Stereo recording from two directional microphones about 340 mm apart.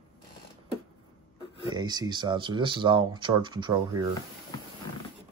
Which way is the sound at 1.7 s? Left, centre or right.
Centre.